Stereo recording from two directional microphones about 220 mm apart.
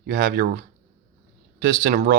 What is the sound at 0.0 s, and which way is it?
Speech, 55° right (ahead or behind).